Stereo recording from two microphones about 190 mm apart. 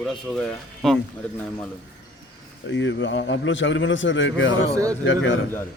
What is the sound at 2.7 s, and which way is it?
A man's voice, 75° left (ahead or behind).